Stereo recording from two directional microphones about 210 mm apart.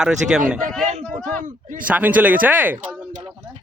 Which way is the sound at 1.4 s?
40° right (ahead or behind).